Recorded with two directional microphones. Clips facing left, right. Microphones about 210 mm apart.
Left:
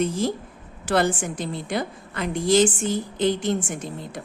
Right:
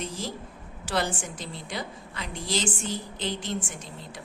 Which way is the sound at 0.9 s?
55° left (ahead or behind).